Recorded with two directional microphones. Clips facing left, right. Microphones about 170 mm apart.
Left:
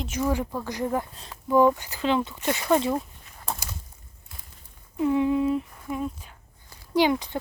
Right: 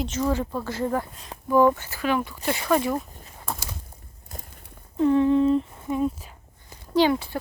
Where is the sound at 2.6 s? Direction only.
25° left (ahead or behind).